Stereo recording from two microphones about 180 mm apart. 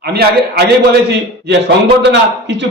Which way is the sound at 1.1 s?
75° right (ahead or behind).